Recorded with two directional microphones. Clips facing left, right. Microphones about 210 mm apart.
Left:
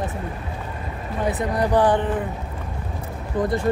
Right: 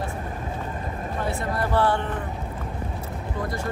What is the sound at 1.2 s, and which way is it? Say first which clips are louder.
Speech: left 6 dB; 15° left (ahead or behind).